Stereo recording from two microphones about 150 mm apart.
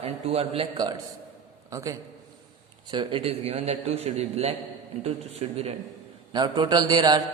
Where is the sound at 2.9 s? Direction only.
30° right (ahead or behind).